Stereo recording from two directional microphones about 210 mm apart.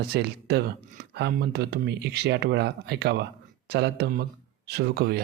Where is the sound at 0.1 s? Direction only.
50° right (ahead or behind).